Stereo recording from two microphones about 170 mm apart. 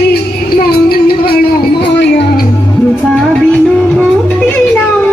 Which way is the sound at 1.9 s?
85° left.